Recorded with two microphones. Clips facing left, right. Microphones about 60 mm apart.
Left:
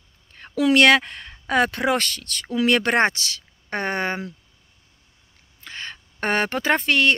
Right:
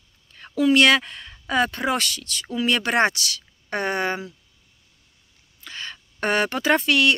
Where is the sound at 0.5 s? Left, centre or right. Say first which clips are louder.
Left 1 dB; left.